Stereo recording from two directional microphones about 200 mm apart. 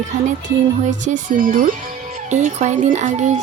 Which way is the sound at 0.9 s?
40° right (ahead or behind).